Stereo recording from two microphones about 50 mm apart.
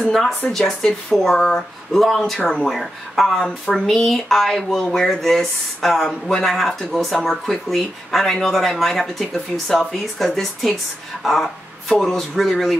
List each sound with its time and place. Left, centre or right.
0.0 s speech: centre